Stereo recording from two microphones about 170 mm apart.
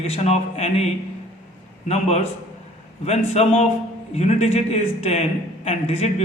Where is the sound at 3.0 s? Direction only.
40° left (ahead or behind).